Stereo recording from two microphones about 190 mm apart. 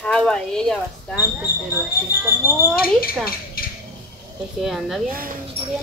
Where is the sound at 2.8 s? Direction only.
50° left (ahead or behind).